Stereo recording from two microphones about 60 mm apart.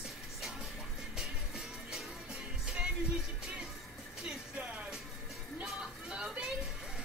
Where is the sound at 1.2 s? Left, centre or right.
Centre.